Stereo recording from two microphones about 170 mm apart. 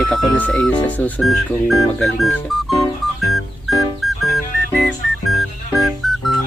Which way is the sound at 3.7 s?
Centre (ahead or behind).